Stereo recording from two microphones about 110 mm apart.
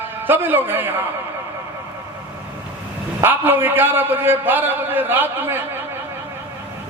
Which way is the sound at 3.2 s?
20° right (ahead or behind).